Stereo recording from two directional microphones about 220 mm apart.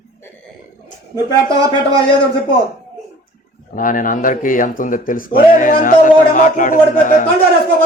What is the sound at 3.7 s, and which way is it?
Speech, 40° left (ahead or behind).